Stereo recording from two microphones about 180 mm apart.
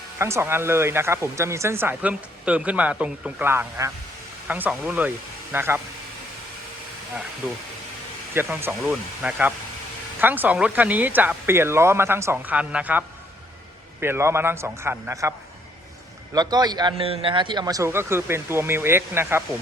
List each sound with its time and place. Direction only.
0.2 s speech: 15° right (ahead or behind)
8.3 s speech: 10° right (ahead or behind)
16.3 s speech: 20° right (ahead or behind)